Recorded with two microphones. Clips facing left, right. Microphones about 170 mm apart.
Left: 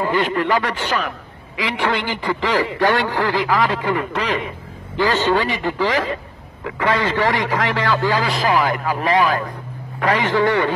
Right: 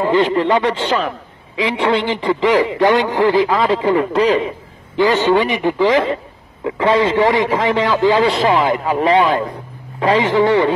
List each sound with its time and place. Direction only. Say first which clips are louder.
0.0 s a man's voice: right 5 dB; 25° right (ahead or behind)
4.9 s a man's voice: right 4 dB; 20° right (ahead or behind)